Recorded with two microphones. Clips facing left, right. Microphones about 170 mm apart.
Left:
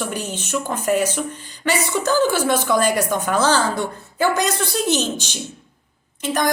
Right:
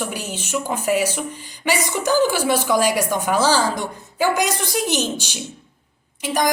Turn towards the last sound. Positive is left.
turn(degrees=-10)  # may be behind; listen again after turning